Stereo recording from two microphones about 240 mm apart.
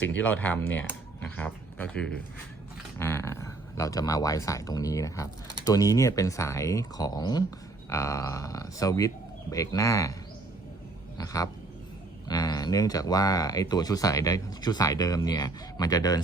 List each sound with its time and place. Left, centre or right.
0.2 s speech: centre
11.2 s speech: centre